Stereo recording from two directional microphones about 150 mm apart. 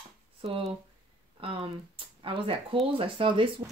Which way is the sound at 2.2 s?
35° right (ahead or behind).